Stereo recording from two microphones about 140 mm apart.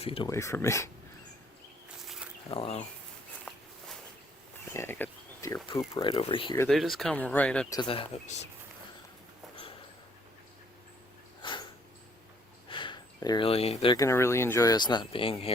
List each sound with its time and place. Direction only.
0.0 s speech: 40° left (ahead or behind)
0.3 s speech: 20° left (ahead or behind)
2.5 s speech: 45° left (ahead or behind)
3.5 s walk: 10° left (ahead or behind)
4.7 s speech: 15° left (ahead or behind)
6.0 s speech: 40° left (ahead or behind)
6.7 s speech: centre (ahead or behind)
7.9 s speech: 40° left (ahead or behind)
11.4 s dog: 35° left (ahead or behind)
12.6 s a sound: 35° left (ahead or behind)
13.5 s speech: 45° left (ahead or behind)
13.9 s speech: 20° left (ahead or behind); by 15.5 s 45° left (ahead or behind)